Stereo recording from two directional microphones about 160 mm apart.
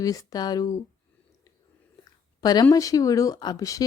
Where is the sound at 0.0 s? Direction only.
20° left (ahead or behind).